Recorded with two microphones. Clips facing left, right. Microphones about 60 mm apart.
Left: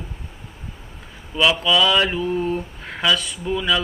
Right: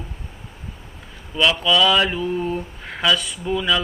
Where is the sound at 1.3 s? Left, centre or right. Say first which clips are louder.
Even; centre.